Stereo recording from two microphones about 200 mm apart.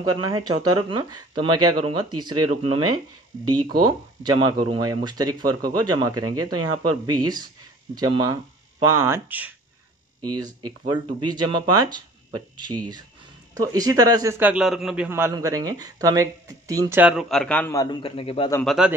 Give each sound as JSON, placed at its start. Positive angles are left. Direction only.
{"t": 0.0, "sound": "speech", "side_deg": -20}
{"t": 3.8, "sound": "speech", "side_deg": -20}
{"t": 7.9, "sound": "a man's voice", "side_deg": -20}
{"t": 18.0, "sound": "speech", "side_deg": 25}
{"t": 18.5, "sound": "speech", "side_deg": 5}